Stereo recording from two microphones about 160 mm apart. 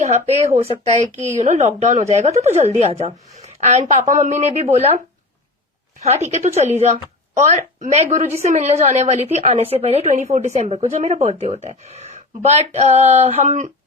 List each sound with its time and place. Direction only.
0.0 s speech: 45° right (ahead or behind)
1.1 s a woman's voice: 15° right (ahead or behind)
1.4 s a woman's voice: 45° right (ahead or behind)
6.0 s a woman's voice: 40° right (ahead or behind)